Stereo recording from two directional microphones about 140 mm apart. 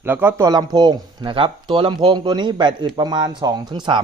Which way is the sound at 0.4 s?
30° right (ahead or behind).